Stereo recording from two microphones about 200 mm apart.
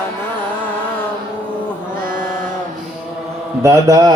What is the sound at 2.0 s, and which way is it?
Chant, 45° right (ahead or behind).